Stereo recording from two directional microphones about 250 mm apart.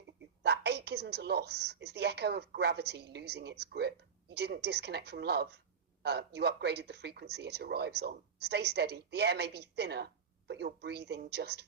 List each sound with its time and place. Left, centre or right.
0.4 s speech: right